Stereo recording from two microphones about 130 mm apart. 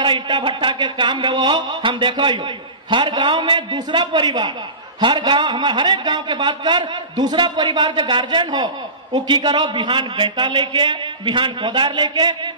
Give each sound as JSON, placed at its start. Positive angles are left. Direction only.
{"t": 0.0, "sound": "a man's voice", "side_deg": -35}